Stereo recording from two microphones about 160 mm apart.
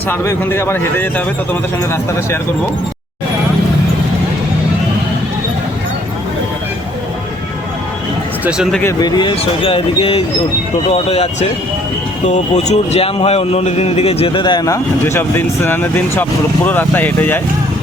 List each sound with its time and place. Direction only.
0.1 s speech: 15° left (ahead or behind)
8.4 s speech: 5° right (ahead or behind)
8.8 s speech: 20° left (ahead or behind)